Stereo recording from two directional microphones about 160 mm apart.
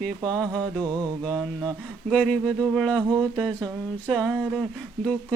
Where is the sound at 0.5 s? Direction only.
25° right (ahead or behind).